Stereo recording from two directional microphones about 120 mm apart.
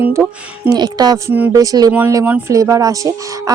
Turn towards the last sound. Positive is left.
turn(degrees=-30)  # may be behind; listen again after turning